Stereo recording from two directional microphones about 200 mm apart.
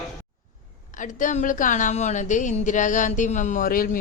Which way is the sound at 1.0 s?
40° left (ahead or behind).